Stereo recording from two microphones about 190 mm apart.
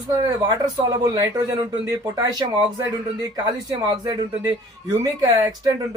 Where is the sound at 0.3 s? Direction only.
20° right (ahead or behind).